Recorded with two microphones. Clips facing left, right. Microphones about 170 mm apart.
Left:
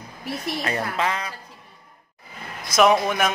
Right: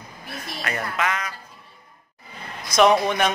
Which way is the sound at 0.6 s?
30° left (ahead or behind).